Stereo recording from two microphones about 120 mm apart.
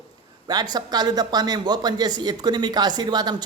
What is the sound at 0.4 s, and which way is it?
Speech, 35° right (ahead or behind).